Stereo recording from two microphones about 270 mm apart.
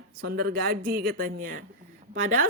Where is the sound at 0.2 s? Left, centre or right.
Right.